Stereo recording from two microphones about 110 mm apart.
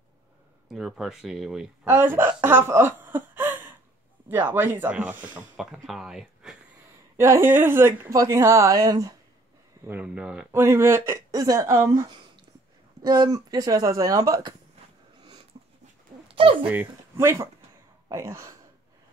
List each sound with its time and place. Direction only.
0.7 s speech: 5° right (ahead or behind)
1.9 s speech: 20° right (ahead or behind)
5.6 s speech: 5° right (ahead or behind)
7.2 s a woman's voice: 25° right (ahead or behind)
9.8 s speech: 10° right (ahead or behind)
10.5 s a woman's voice: 25° right (ahead or behind)
13.0 s speech: 40° right (ahead or behind)
16.8 s a woman's voice: 25° right (ahead or behind)